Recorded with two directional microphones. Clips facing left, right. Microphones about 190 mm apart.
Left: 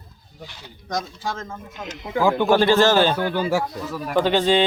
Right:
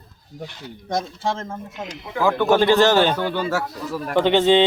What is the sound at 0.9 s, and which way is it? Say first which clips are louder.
Speech: right 3 dB; 25° right (ahead or behind).